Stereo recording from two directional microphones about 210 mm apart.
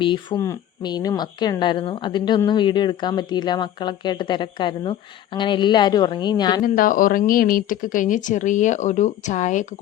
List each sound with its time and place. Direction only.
0.0 s speech: 20° left (ahead or behind)
6.6 s speech: 40° left (ahead or behind)